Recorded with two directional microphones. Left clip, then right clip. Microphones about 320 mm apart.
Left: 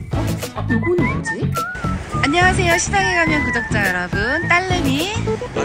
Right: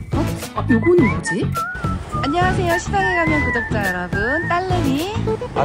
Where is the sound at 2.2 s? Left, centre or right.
Centre.